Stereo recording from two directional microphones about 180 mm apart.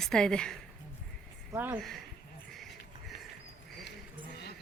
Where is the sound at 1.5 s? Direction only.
10° right (ahead or behind).